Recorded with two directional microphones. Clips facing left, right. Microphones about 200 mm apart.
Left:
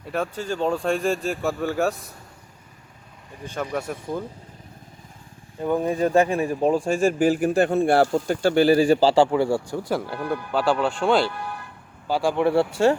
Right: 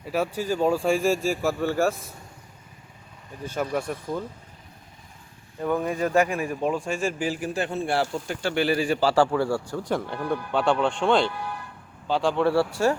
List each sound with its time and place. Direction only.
0.0 s speech: 5° right (ahead or behind)
3.5 s speech: 5° right (ahead or behind)
5.6 s speech: 30° left (ahead or behind)
9.1 s speech: 15° left (ahead or behind)